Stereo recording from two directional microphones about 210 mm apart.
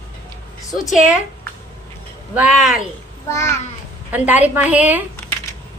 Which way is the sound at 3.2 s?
10° left (ahead or behind).